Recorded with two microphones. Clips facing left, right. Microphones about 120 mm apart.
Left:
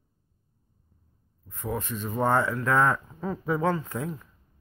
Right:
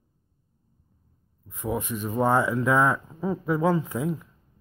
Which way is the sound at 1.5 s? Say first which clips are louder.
Right 3 dB; 10° right (ahead or behind).